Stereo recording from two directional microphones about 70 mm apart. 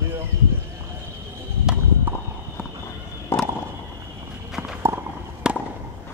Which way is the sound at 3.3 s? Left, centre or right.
Left.